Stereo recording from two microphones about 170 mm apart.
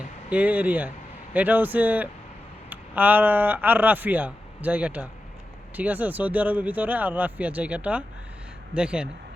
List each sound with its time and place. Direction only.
0.3 s speech: 10° right (ahead or behind)